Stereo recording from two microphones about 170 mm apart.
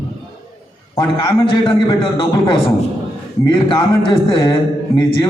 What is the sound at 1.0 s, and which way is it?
A man's voice, 25° left (ahead or behind).